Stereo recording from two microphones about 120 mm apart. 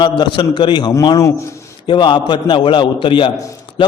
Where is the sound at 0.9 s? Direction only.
25° left (ahead or behind).